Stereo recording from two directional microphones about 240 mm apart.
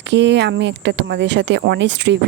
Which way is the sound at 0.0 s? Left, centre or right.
Right.